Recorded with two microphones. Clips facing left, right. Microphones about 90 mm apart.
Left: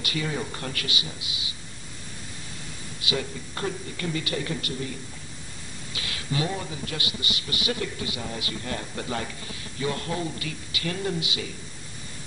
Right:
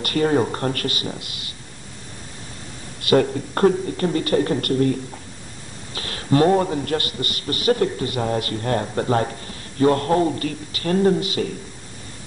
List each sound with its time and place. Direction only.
0.0 s a man's voice: 45° right (ahead or behind)
3.0 s a man's voice: 50° right (ahead or behind)
5.9 s a man's voice: 40° right (ahead or behind)